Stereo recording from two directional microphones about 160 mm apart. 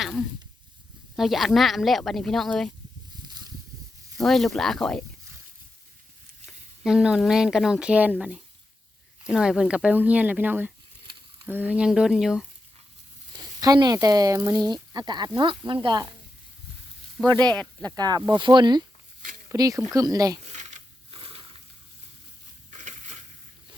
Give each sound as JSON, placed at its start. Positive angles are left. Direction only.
{"t": 0.0, "sound": "a sound", "side_deg": 0}
{"t": 1.1, "sound": "speech", "side_deg": 0}
{"t": 4.2, "sound": "speech", "side_deg": 0}
{"t": 6.8, "sound": "speech", "side_deg": -5}
{"t": 13.6, "sound": "speech", "side_deg": -25}
{"t": 17.2, "sound": "speech", "side_deg": 0}
{"t": 17.9, "sound": "speech", "side_deg": -25}
{"t": 20.5, "sound": "a sound", "side_deg": -45}
{"t": 21.2, "sound": "crushing", "side_deg": -35}
{"t": 22.7, "sound": "crushing", "side_deg": -50}